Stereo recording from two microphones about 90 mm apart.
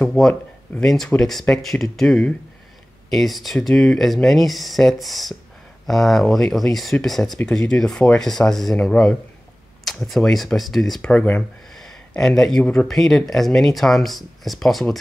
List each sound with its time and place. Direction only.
0.2 s speech: 5° left (ahead or behind)
11.0 s speech: 15° left (ahead or behind)
11.7 s speech: 5° left (ahead or behind)